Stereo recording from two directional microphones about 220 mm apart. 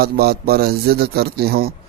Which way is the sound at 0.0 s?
45° right (ahead or behind).